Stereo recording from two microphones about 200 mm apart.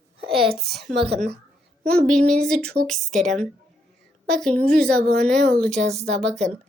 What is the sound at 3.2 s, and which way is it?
Speech, 35° right (ahead or behind).